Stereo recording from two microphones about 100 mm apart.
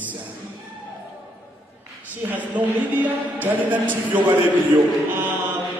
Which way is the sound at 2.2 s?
15° right (ahead or behind).